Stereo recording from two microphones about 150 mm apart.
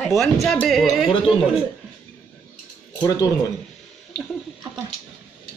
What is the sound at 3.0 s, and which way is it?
Speech, 25° left (ahead or behind).